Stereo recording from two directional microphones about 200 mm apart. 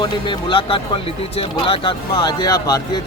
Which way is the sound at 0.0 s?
25° left (ahead or behind).